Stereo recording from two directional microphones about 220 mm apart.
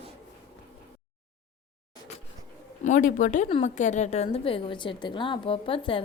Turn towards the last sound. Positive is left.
turn(degrees=25)  # may be behind; listen again after turning